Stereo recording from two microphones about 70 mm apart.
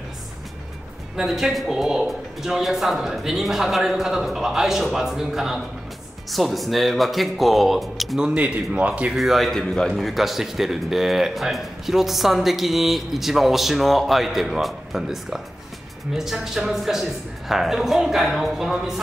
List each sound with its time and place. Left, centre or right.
1.1 s a man's voice: centre
8.2 s a man's voice: centre
9.1 s a man's voice: centre